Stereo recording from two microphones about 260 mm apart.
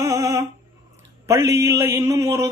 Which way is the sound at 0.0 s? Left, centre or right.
Centre.